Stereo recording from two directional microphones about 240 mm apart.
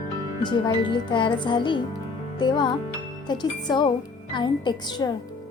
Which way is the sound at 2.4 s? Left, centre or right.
Centre.